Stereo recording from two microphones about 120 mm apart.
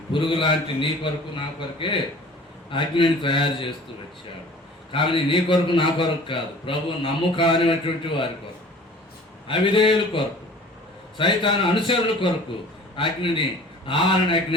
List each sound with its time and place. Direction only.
0.1 s a man's voice: 45° left (ahead or behind)
4.9 s a man's voice: 45° left (ahead or behind)
9.5 s a man's voice: 45° left (ahead or behind)